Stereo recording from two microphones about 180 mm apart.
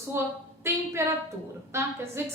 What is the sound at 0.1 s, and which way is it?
A woman's voice, 15° right (ahead or behind).